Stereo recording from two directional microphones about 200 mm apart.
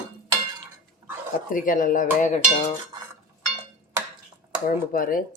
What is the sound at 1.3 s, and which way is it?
Speech, 45° left (ahead or behind).